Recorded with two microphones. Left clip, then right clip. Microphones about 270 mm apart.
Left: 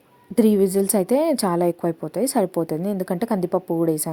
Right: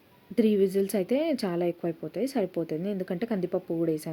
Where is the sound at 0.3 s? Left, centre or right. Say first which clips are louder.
Left 6 dB; centre.